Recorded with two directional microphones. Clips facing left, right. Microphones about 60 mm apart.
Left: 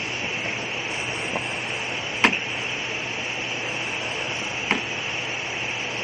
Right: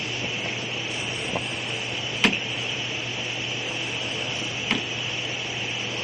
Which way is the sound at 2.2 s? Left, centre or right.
Left.